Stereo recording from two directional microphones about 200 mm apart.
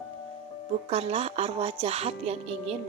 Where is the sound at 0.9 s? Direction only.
30° right (ahead or behind).